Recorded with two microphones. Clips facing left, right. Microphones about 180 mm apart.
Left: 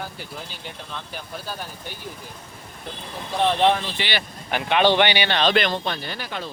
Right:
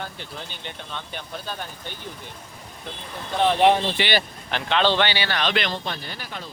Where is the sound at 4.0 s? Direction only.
70° right (ahead or behind).